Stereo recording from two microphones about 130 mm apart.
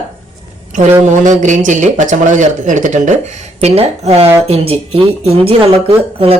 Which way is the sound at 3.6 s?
55° right (ahead or behind).